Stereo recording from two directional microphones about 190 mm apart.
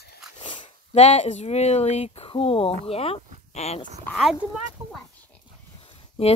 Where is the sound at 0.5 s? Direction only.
30° left (ahead or behind).